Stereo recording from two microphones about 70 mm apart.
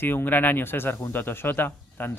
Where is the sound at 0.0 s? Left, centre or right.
Left.